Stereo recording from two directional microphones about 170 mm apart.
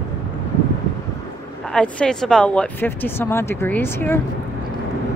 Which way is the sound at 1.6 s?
5° left (ahead or behind).